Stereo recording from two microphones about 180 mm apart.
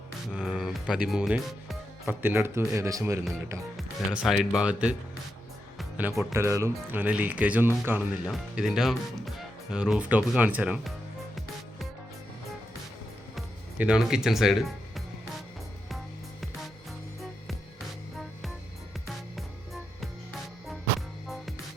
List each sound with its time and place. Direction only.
0.3 s speech: 5° right (ahead or behind)
3.8 s speech: centre (ahead or behind)
6.3 s speech: 15° right (ahead or behind)
13.3 s music: 5° right (ahead or behind)
19.0 s music: centre (ahead or behind)